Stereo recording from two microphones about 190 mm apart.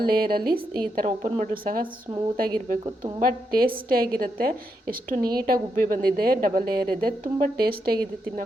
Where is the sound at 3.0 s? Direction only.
50° right (ahead or behind).